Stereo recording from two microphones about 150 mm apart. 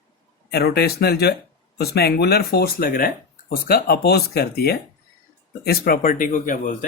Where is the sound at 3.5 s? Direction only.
85° left.